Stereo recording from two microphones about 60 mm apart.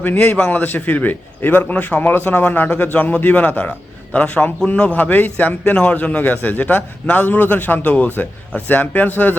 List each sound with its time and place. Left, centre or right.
0.0 s a man's voice: left
2.6 s a man's voice: left